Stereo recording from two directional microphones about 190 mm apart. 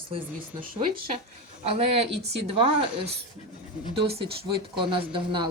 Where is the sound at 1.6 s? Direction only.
30° right (ahead or behind).